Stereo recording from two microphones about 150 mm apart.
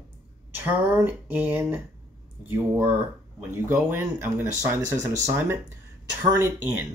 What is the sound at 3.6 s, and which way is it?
Speech, 15° right (ahead or behind).